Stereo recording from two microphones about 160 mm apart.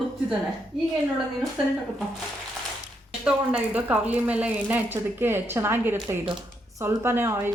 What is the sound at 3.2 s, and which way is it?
Speech, 5° right (ahead or behind).